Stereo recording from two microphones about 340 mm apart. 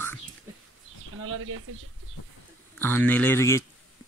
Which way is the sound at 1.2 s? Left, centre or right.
Right.